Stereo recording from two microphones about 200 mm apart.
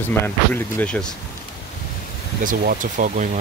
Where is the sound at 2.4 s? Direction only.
45° right (ahead or behind).